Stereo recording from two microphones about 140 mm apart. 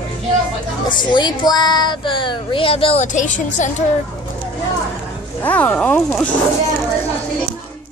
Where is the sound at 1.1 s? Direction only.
30° left (ahead or behind).